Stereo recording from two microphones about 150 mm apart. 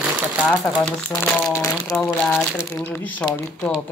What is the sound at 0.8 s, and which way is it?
Speech, 5° left (ahead or behind).